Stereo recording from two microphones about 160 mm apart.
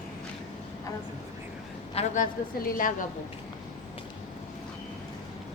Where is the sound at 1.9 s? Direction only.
55° left (ahead or behind).